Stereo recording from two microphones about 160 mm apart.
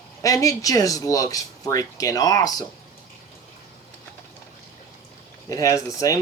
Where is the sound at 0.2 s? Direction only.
20° left (ahead or behind).